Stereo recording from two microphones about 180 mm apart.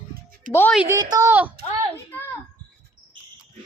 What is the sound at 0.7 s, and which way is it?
Speech, 10° right (ahead or behind).